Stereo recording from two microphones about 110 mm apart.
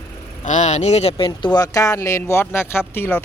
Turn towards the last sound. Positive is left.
turn(degrees=20)  # may be behind; listen again after turning